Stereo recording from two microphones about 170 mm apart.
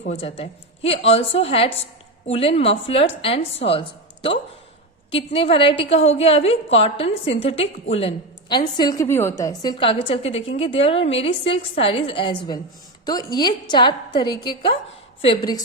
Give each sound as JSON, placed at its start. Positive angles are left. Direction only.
{"t": 0.1, "sound": "a woman's voice", "side_deg": 35}
{"t": 9.7, "sound": "a woman's voice", "side_deg": 35}